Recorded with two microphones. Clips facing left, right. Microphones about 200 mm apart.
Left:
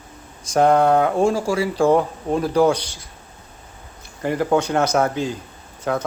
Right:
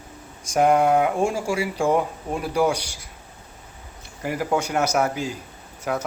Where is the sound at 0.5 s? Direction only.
10° right (ahead or behind).